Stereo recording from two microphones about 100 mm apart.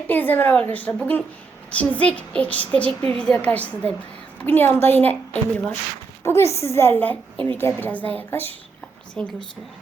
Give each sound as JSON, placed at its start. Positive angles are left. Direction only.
{"t": 0.1, "sound": "a woman's voice", "side_deg": 20}
{"t": 6.2, "sound": "a woman's voice", "side_deg": 25}